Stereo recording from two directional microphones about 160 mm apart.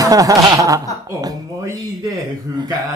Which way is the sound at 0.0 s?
20° right (ahead or behind).